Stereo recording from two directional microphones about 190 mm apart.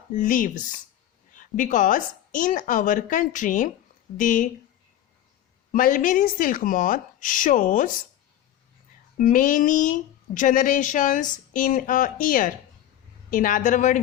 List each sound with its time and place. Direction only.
0.1 s a woman's voice: 45° left (ahead or behind)
5.7 s a woman's voice: 45° left (ahead or behind)
9.1 s a woman's voice: 45° left (ahead or behind)